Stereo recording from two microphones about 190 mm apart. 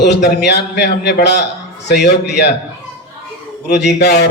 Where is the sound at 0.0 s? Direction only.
65° left (ahead or behind).